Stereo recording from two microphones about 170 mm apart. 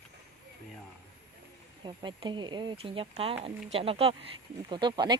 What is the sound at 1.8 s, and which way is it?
A woman's voice, 25° right (ahead or behind).